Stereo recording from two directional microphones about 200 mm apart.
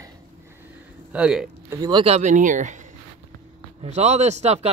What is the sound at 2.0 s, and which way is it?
Speech, 35° right (ahead or behind).